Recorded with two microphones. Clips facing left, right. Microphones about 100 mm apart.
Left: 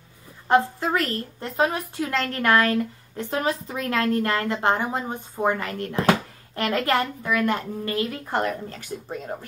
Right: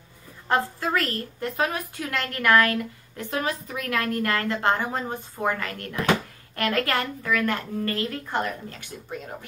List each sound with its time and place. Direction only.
0.5 s a woman's voice: 20° left (ahead or behind)
8.3 s speech: 35° left (ahead or behind)